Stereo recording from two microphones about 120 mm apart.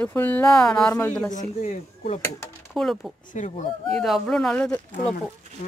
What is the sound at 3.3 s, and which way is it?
Speech, 90° left.